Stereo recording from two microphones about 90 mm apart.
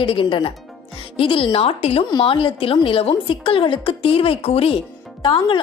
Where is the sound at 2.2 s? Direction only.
75° left (ahead or behind); by 4.8 s 90° left.